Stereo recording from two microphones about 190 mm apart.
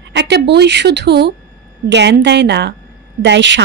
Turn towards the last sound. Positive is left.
turn(degrees=-70)  # may be behind; listen again after turning